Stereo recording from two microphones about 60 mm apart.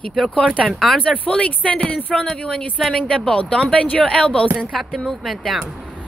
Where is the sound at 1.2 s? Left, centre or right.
Left.